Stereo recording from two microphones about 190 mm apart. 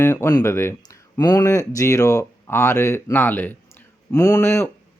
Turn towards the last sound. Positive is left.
turn(degrees=10)  # may be behind; listen again after turning